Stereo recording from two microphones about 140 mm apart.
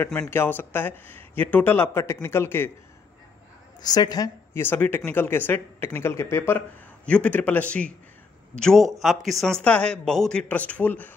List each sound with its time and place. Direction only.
0.3 s speech: 15° left (ahead or behind)
3.8 s a woman's voice: 30° left (ahead or behind)
4.6 s speech: 15° left (ahead or behind)